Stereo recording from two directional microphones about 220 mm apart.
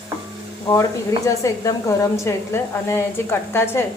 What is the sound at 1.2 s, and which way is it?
A woman's voice, 15° left (ahead or behind).